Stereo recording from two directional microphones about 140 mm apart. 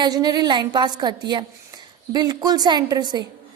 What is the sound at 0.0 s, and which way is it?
A woman's voice, 30° right (ahead or behind).